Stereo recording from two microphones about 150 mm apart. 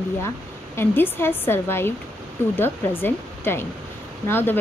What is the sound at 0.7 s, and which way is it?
A woman's voice, 15° left (ahead or behind).